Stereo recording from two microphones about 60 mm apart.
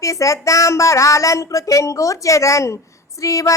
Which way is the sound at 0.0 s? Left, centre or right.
Left.